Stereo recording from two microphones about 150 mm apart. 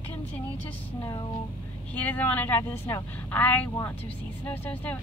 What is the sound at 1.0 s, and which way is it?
Speech, 25° left (ahead or behind).